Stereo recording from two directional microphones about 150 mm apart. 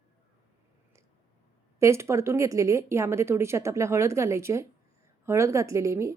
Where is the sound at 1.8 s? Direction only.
20° right (ahead or behind).